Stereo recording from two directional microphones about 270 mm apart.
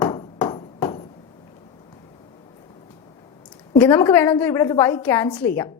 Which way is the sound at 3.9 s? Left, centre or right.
Centre.